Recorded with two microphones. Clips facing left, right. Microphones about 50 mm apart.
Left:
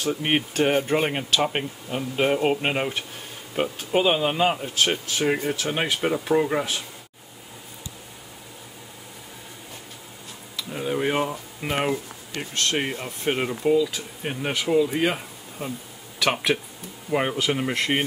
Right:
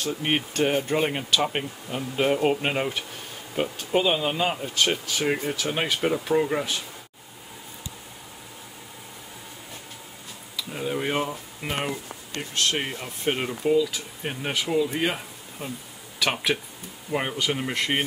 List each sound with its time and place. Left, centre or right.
0.0 s speech: centre
10.6 s speech: centre